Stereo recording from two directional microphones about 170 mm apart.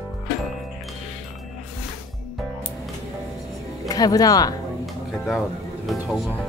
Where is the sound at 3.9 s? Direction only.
20° left (ahead or behind).